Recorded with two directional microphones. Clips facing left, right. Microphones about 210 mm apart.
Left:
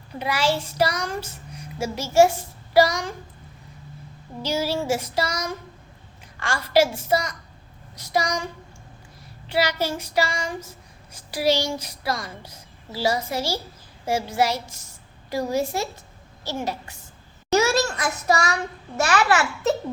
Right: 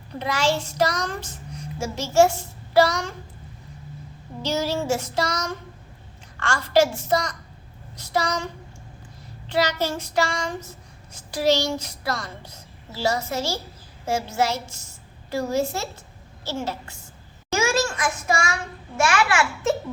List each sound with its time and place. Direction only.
0.2 s speech: 10° left (ahead or behind)
4.4 s speech: 10° left (ahead or behind)
9.5 s speech: 10° left (ahead or behind)
17.5 s a sound: 40° left (ahead or behind)